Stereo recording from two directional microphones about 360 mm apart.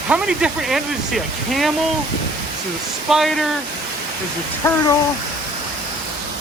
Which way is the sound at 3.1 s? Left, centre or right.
Centre.